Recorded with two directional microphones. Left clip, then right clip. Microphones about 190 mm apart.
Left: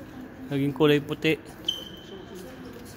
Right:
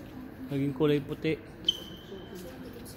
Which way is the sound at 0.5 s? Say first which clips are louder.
Left 6 dB; 20° left (ahead or behind).